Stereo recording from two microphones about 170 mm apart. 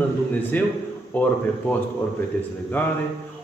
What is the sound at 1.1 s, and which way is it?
Speech, 10° left (ahead or behind).